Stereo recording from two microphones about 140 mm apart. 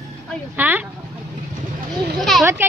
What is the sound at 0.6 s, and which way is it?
Speech, 10° right (ahead or behind).